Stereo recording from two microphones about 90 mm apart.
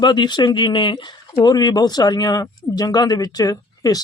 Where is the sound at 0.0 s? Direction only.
60° left (ahead or behind).